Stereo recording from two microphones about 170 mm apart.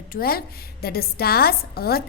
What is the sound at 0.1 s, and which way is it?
Speech, 60° left (ahead or behind).